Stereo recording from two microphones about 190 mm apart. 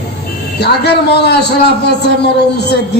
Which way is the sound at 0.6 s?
60° left (ahead or behind).